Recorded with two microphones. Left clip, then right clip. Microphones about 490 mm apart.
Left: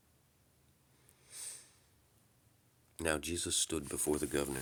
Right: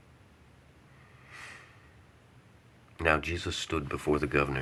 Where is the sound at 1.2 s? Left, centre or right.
Left.